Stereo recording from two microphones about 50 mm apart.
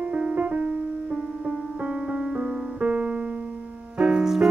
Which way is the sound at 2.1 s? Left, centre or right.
Right.